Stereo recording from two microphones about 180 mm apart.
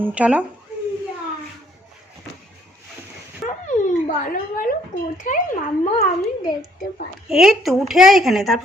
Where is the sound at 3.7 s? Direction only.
45° left (ahead or behind).